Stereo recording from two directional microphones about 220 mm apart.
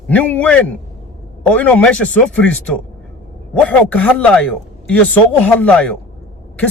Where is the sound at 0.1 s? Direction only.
5° left (ahead or behind).